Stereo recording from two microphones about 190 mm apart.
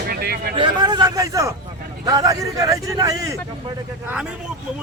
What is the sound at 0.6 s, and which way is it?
A man's voice, 25° right (ahead or behind).